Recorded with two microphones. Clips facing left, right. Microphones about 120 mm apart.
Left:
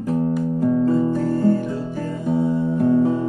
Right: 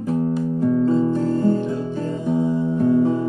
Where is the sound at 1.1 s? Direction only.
20° right (ahead or behind).